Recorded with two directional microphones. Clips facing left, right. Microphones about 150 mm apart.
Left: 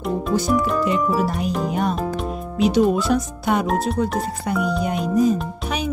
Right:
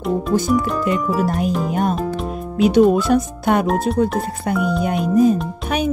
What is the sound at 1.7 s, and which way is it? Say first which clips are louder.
Speech: right 3 dB; 45° right (ahead or behind).